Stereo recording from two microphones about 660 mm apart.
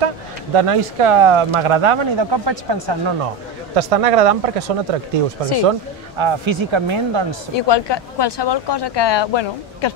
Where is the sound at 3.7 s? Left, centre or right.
Right.